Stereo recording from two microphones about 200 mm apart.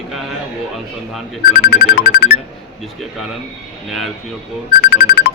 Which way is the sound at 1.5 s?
45° left (ahead or behind).